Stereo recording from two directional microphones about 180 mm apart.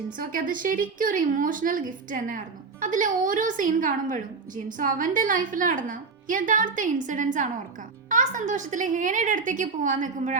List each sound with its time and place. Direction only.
0.2 s a woman's voice: 50° right (ahead or behind)